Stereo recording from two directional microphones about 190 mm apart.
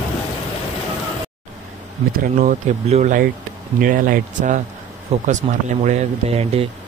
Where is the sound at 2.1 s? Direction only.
45° right (ahead or behind).